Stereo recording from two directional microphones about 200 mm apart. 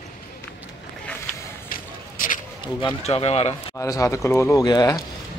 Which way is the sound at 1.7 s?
45° left (ahead or behind).